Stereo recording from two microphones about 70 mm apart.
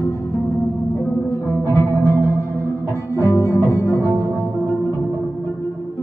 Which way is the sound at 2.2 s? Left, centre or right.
Left.